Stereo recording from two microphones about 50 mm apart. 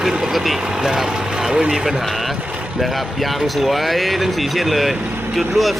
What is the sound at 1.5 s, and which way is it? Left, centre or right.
Speech, centre.